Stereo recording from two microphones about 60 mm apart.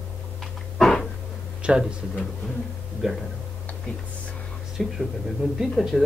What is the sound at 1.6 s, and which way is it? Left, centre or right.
Speech, centre.